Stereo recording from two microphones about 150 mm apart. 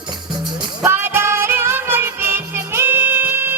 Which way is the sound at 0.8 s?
15° right (ahead or behind).